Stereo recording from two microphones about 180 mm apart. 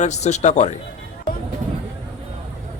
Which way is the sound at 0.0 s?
40° left (ahead or behind).